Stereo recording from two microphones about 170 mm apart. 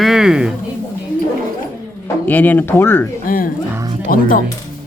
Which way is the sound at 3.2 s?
55° left (ahead or behind).